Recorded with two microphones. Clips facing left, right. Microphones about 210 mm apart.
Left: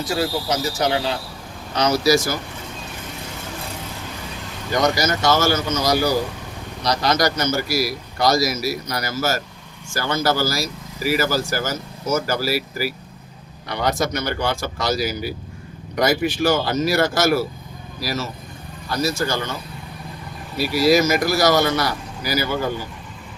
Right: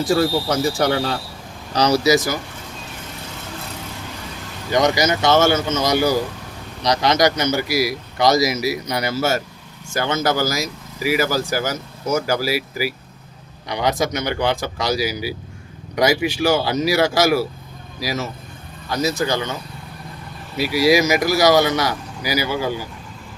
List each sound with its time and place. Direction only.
0.0 s speech: 50° right (ahead or behind)
2.0 s a man's voice: 20° right (ahead or behind)
4.8 s a man's voice: 15° right (ahead or behind)
20.6 s speech: 15° right (ahead or behind)